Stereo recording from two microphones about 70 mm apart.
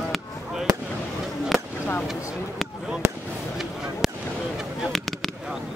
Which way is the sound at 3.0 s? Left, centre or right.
Right.